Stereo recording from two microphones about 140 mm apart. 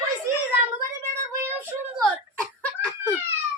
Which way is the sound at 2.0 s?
10° left (ahead or behind).